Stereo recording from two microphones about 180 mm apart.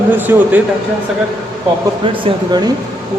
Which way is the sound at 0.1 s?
10° right (ahead or behind).